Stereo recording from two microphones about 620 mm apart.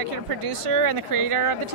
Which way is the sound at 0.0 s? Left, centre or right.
Right.